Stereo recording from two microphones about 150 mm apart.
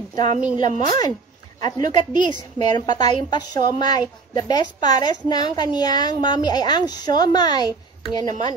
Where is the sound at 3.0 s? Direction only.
30° left (ahead or behind).